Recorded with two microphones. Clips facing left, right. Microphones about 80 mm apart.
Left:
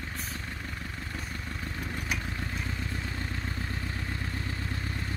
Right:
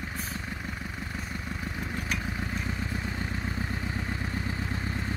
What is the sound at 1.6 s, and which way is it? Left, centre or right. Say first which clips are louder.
Vehicle: right 1 dB; centre.